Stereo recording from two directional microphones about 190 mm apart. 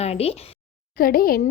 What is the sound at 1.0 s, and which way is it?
Speech, 50° left (ahead or behind).